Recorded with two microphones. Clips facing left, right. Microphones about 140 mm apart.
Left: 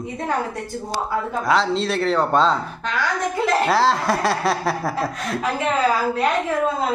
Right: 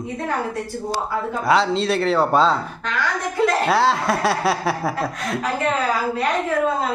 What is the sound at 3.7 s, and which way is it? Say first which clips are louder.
Speech: even; centre (ahead or behind).